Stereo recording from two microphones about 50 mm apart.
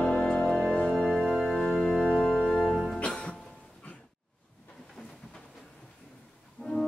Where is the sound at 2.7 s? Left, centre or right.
Centre.